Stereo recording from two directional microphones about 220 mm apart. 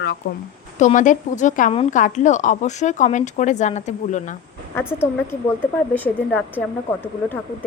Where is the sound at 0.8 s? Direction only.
35° left (ahead or behind).